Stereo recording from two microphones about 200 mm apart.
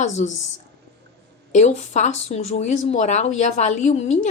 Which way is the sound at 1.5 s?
35° left (ahead or behind).